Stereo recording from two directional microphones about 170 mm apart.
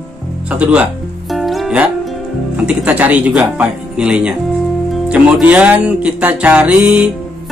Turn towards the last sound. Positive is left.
turn(degrees=-5)  # may be behind; listen again after turning